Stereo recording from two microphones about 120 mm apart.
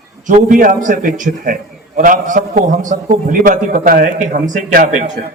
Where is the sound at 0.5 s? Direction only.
90° right.